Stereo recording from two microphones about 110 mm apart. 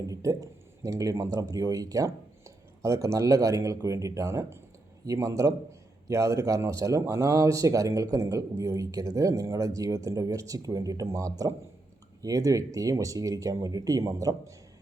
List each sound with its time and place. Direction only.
0.1 s a man's voice: 30° right (ahead or behind)